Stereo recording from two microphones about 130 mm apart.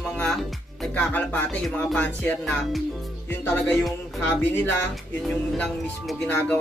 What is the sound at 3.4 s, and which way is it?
Music, 15° left (ahead or behind).